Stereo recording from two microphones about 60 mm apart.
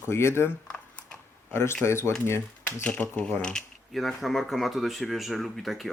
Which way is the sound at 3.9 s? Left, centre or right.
Centre.